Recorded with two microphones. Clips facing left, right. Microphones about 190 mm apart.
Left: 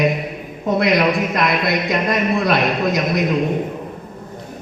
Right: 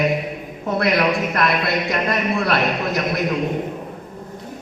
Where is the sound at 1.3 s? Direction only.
15° left (ahead or behind).